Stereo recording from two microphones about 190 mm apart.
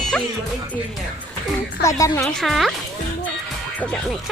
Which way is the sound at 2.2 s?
Centre (ahead or behind).